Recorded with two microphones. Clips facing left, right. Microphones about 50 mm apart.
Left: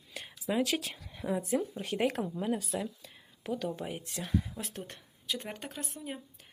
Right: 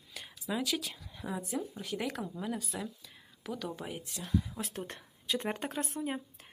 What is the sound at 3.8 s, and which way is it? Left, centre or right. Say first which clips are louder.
Speech: left 2 dB; centre.